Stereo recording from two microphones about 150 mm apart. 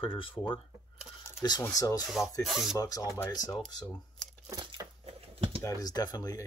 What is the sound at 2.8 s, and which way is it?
Speech, 25° left (ahead or behind).